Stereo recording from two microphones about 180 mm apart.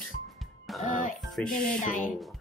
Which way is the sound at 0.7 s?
Centre (ahead or behind).